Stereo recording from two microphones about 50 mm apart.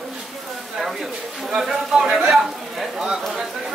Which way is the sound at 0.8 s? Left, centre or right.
Centre.